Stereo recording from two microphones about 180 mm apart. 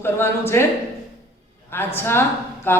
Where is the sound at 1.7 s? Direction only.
10° left (ahead or behind).